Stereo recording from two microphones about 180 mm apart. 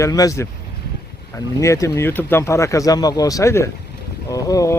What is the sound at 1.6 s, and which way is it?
Speech, 15° left (ahead or behind).